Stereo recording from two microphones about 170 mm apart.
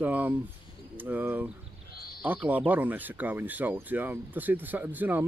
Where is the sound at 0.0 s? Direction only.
10° right (ahead or behind).